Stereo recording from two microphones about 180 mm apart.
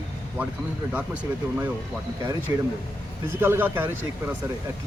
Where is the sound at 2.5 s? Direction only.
15° right (ahead or behind).